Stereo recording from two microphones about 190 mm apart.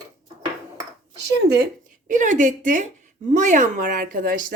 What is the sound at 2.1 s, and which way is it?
A woman's voice, 40° right (ahead or behind).